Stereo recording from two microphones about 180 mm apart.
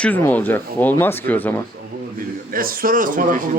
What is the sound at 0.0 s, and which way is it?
Speech, 10° left (ahead or behind).